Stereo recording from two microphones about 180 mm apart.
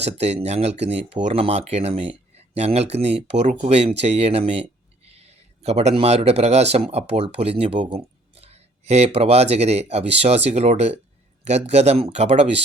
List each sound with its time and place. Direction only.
0.0 s speech: 35° right (ahead or behind)
5.0 s a sound: 35° right (ahead or behind)
6.0 s speech: 35° right (ahead or behind)